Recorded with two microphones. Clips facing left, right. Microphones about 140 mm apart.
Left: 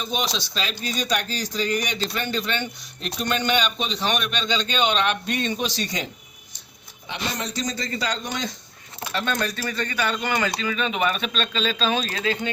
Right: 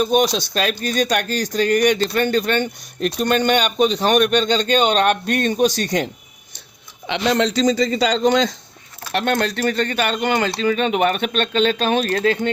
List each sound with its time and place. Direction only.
0.0 s speech: 50° right (ahead or behind)
7.1 s a man's voice: 80° right
9.1 s speech: 65° right (ahead or behind)